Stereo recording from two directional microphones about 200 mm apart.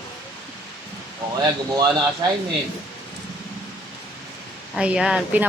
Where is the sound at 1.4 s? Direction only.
20° right (ahead or behind).